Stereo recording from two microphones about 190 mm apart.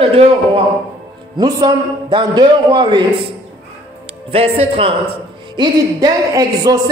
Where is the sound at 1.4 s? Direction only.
20° right (ahead or behind).